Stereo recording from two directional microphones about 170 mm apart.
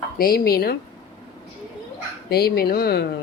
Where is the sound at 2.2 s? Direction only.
65° left (ahead or behind).